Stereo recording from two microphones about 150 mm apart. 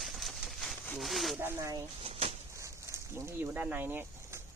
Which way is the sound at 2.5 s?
20° right (ahead or behind).